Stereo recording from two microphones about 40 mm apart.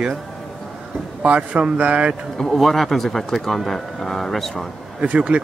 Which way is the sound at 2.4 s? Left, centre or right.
Centre.